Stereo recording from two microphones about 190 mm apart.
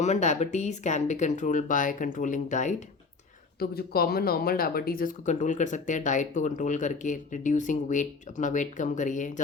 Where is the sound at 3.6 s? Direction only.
55° left (ahead or behind).